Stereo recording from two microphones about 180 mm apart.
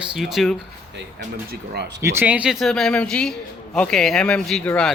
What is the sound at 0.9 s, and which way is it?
Speech, 70° right (ahead or behind).